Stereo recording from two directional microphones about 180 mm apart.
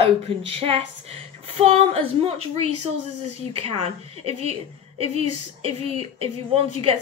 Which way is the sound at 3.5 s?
30° right (ahead or behind).